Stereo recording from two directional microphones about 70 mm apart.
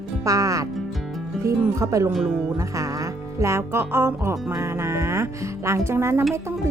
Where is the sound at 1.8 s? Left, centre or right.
Right.